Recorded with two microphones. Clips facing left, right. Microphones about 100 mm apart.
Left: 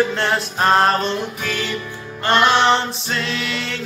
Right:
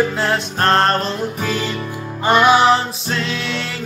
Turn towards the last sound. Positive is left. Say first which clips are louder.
# right 1 dB
turn(degrees=0)  # may be behind; listen again after turning